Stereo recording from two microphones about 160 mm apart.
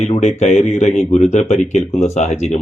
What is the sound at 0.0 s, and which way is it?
Speech, 45° left (ahead or behind).